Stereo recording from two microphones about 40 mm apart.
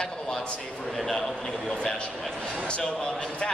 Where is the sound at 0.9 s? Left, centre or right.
Centre.